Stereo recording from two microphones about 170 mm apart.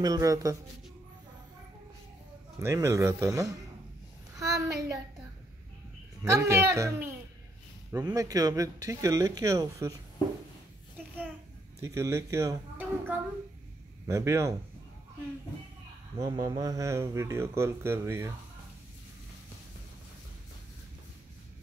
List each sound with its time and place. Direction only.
0.0 s speech: 20° right (ahead or behind)
2.6 s a woman's voice: 15° right (ahead or behind)
6.2 s speech: 15° right (ahead or behind)
11.8 s speech: 15° right (ahead or behind)
16.2 s speech: 20° right (ahead or behind)